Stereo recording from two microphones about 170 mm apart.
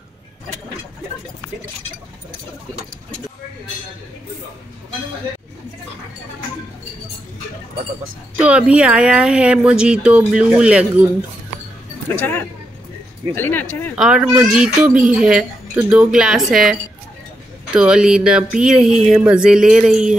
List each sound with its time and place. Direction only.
8.4 s speech: 5° right (ahead or behind)
12.2 s speech: 10° left (ahead or behind)
13.9 s speech: 5° right (ahead or behind)
17.7 s speech: 5° right (ahead or behind)